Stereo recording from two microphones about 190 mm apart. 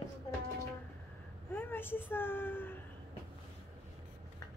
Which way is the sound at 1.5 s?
10° left (ahead or behind).